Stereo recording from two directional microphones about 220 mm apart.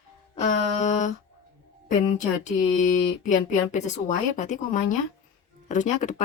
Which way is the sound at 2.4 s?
35° left (ahead or behind).